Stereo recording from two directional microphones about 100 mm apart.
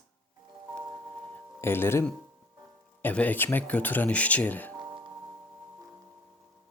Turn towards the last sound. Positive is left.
turn(degrees=15)  # may be behind; listen again after turning